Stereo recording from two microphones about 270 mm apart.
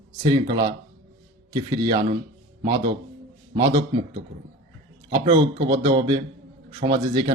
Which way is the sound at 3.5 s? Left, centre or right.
Centre.